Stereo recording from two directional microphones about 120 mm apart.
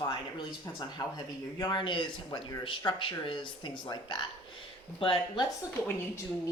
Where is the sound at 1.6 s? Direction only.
40° left (ahead or behind).